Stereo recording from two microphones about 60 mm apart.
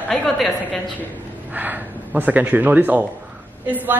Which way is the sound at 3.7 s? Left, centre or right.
Right.